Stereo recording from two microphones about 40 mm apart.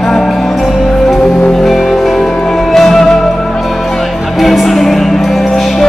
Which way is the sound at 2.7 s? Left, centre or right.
Centre.